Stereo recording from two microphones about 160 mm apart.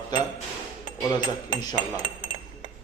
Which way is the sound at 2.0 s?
30° right (ahead or behind).